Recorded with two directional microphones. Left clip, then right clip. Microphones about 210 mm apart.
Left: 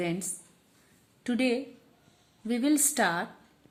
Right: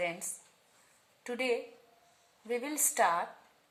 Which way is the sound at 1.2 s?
40° left (ahead or behind).